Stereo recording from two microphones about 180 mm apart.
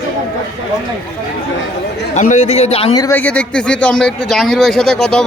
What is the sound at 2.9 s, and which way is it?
Speech, 20° left (ahead or behind).